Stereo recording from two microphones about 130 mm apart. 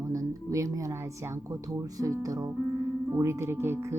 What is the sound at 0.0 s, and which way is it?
Speech, 25° right (ahead or behind).